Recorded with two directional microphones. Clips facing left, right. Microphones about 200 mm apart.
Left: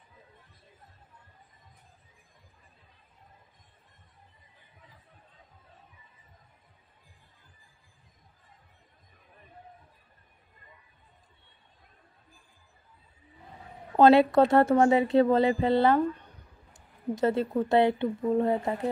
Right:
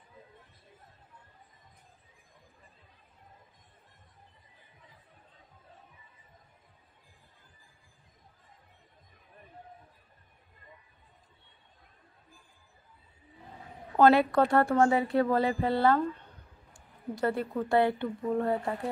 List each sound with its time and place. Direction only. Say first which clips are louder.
13.9 s speech: left 3 dB; 20° left (ahead or behind)